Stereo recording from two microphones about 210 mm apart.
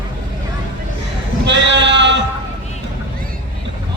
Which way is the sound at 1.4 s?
55° right (ahead or behind).